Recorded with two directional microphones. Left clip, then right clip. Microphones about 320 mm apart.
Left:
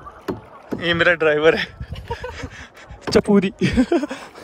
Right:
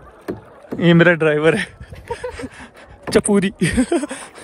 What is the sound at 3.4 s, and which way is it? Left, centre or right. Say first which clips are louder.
Speech: right 1 dB; right.